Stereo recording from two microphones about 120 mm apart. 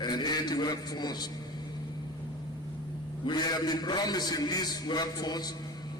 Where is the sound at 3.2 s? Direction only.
35° left (ahead or behind).